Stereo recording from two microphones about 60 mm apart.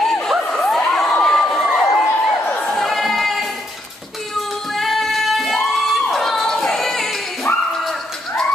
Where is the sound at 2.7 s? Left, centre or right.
Centre.